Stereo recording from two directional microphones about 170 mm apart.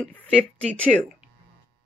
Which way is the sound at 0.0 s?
10° left (ahead or behind).